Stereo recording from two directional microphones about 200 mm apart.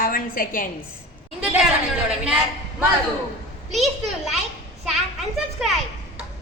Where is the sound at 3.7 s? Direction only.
Centre (ahead or behind).